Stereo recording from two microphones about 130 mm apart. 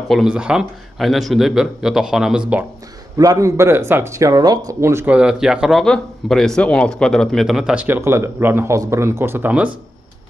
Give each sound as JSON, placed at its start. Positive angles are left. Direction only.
{"t": 0.1, "sound": "a man's voice", "side_deg": -5}
{"t": 3.2, "sound": "speech", "side_deg": -25}